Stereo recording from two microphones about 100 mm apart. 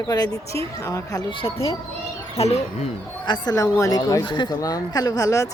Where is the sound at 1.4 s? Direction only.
50° left (ahead or behind).